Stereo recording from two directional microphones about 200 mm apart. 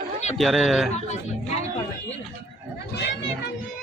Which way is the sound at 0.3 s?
Centre (ahead or behind).